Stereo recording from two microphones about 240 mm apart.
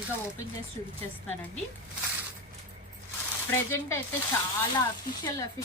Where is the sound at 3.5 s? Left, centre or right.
Centre.